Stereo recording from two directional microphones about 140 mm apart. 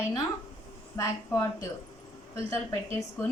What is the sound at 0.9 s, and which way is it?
A woman's voice, 20° left (ahead or behind).